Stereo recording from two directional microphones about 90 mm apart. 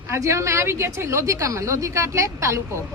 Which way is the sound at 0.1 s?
35° right (ahead or behind).